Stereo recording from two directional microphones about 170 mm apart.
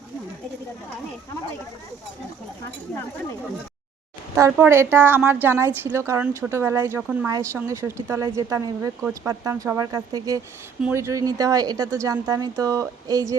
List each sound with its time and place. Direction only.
4.4 s a woman's voice: 10° right (ahead or behind)